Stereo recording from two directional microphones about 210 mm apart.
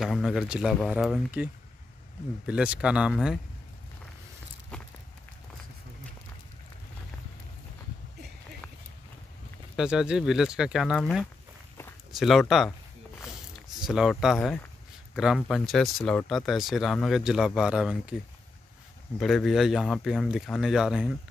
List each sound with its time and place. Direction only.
0.0 s speech: centre (ahead or behind)
9.8 s speech: 5° right (ahead or behind)
13.7 s speech: centre (ahead or behind)
19.1 s speech: centre (ahead or behind)